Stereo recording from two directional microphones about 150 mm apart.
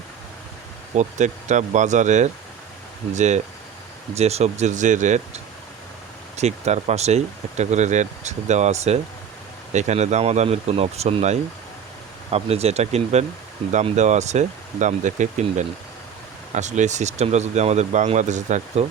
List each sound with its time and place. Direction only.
0.9 s speech: 50° right (ahead or behind)